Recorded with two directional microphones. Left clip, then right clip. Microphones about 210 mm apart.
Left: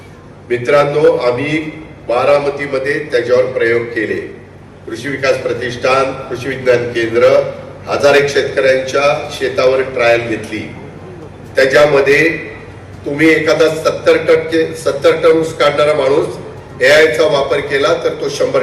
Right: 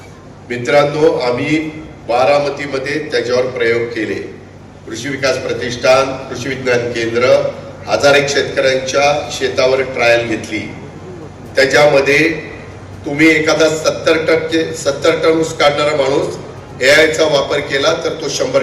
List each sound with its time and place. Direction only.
0.4 s a man's voice: 30° right (ahead or behind)
13.1 s a man's voice: 30° right (ahead or behind)